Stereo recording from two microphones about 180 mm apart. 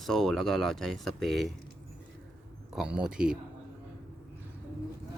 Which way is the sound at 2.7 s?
5° right (ahead or behind).